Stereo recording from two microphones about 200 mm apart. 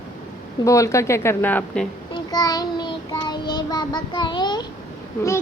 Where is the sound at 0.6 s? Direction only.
15° left (ahead or behind).